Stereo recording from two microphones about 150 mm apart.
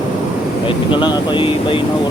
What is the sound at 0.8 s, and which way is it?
Speech, 30° left (ahead or behind).